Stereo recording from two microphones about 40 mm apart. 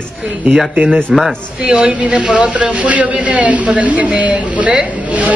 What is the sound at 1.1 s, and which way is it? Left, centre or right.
Speech, centre.